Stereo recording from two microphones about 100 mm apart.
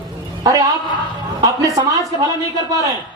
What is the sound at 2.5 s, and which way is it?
Speech, 35° right (ahead or behind).